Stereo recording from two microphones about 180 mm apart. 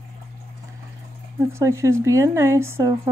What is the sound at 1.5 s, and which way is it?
Speech, 15° right (ahead or behind).